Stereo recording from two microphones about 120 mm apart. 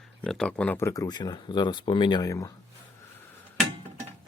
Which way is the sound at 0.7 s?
25° left (ahead or behind).